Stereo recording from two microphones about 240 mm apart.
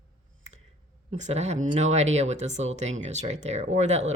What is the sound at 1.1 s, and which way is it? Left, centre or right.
Speech, right.